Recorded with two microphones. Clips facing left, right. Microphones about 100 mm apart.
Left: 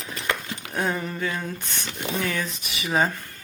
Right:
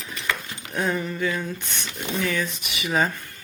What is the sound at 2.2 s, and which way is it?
Speech, 35° left (ahead or behind).